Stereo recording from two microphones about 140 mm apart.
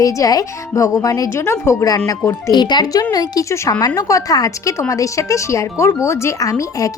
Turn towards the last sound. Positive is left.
turn(degrees=25)  # may be behind; listen again after turning